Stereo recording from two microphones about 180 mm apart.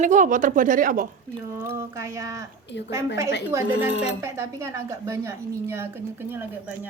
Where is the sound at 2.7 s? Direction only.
85° left.